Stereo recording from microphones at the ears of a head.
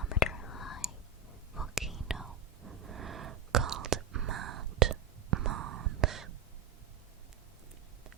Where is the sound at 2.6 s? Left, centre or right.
Right.